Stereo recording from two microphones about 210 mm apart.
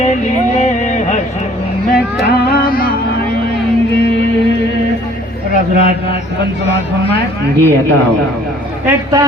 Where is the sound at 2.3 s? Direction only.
45° left (ahead or behind).